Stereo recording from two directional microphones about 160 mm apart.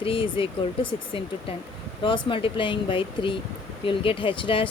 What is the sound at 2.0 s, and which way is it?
Speech, 30° left (ahead or behind).